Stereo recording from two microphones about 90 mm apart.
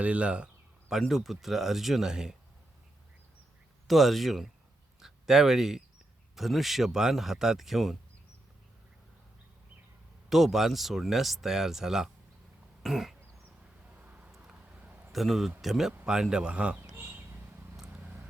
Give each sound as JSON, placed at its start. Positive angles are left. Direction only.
{"t": 0.0, "sound": "speech", "side_deg": -15}
{"t": 3.8, "sound": "speech", "side_deg": 0}
{"t": 10.2, "sound": "speech", "side_deg": 0}
{"t": 12.8, "sound": "throat clearing", "side_deg": -5}
{"t": 13.9, "sound": "a sound", "side_deg": -15}
{"t": 15.1, "sound": "a man's voice", "side_deg": 0}
{"t": 16.8, "sound": "a sound", "side_deg": -30}
{"t": 17.8, "sound": "vehicle", "side_deg": -25}